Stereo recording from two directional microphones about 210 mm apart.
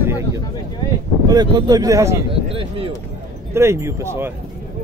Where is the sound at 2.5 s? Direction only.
25° right (ahead or behind).